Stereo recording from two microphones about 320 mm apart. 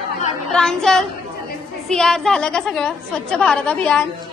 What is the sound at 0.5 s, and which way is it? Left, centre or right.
A woman's voice, centre.